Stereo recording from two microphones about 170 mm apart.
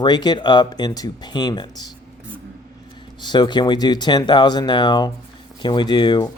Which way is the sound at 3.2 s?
25° left (ahead or behind).